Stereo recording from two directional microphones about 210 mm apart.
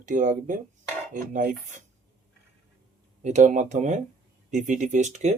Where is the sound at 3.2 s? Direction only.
35° right (ahead or behind).